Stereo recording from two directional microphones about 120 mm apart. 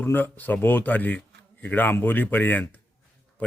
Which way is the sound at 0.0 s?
15° left (ahead or behind).